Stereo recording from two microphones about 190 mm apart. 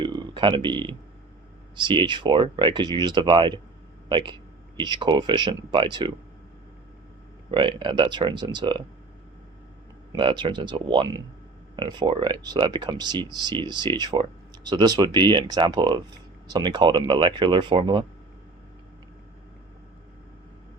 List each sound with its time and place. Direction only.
0.0 s a sound: 25° right (ahead or behind)
1.7 s speech: 25° right (ahead or behind)
7.5 s speech: 25° right (ahead or behind)
10.1 s speech: 25° right (ahead or behind)